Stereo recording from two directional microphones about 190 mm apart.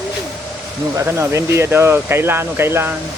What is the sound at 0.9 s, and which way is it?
Speech, 15° right (ahead or behind).